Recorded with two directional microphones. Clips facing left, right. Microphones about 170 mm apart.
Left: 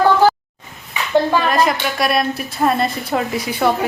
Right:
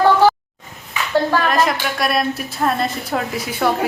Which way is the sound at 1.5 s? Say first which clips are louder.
Left 1 dB; centre (ahead or behind).